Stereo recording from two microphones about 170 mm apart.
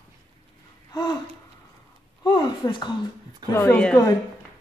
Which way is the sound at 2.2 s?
25° left (ahead or behind).